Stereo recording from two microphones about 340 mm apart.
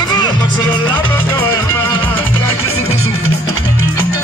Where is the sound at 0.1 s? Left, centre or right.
Centre.